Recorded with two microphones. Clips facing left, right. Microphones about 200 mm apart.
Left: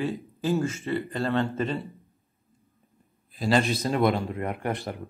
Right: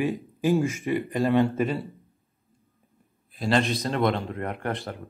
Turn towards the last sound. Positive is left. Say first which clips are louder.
# left 1 dB
turn(degrees=15)  # may be behind; listen again after turning